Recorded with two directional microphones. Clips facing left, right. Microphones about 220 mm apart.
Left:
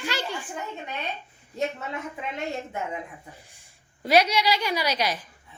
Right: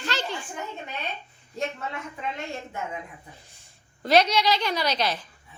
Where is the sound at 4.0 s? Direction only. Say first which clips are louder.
Even; 10° left (ahead or behind).